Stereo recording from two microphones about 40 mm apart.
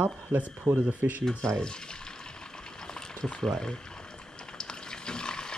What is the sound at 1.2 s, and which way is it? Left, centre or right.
Speech, centre.